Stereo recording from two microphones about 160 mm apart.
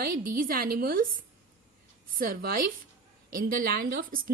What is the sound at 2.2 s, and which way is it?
A woman's voice, 65° right (ahead or behind).